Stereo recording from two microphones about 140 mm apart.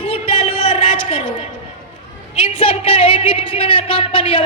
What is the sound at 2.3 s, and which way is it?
A woman's voice, 40° left (ahead or behind).